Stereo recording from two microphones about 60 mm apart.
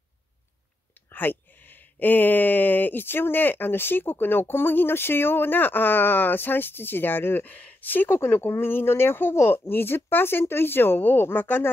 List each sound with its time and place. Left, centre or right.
1.1 s speech: left